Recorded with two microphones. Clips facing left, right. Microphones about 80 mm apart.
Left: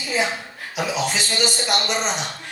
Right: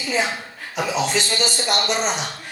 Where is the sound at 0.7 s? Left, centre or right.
Centre.